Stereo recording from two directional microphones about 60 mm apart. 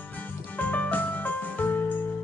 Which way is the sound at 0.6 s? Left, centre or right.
Left.